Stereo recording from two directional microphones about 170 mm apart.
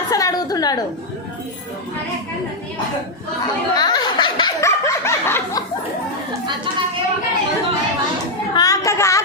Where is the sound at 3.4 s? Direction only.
25° left (ahead or behind).